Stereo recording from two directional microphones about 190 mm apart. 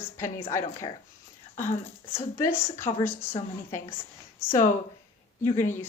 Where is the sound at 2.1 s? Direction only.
10° left (ahead or behind).